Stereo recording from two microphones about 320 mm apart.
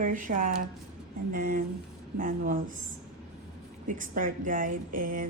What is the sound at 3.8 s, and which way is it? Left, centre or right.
Speech, right.